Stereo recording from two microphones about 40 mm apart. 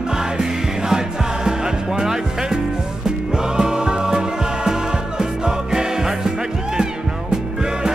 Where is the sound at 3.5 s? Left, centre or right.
Centre.